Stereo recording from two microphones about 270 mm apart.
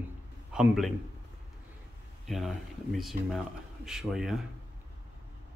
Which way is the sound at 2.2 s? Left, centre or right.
Centre.